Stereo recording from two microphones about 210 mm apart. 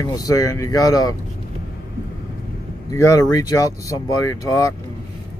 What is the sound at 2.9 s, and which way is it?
Speech, 15° left (ahead or behind).